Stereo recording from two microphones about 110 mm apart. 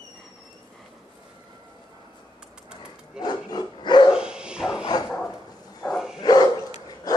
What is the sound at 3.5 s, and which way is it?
Dog, 40° left (ahead or behind).